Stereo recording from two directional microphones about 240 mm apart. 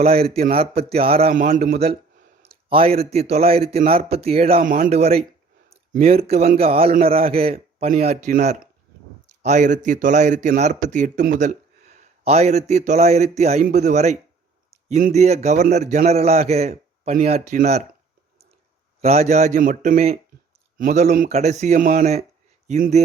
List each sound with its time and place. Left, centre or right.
0.0 s a man's voice: right
1.3 s a man's voice: right
19.0 s a man's voice: right